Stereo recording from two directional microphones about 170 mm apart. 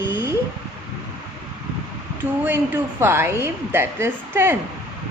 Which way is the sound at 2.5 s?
15° right (ahead or behind).